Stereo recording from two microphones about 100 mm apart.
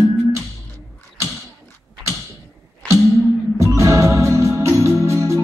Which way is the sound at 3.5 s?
30° right (ahead or behind).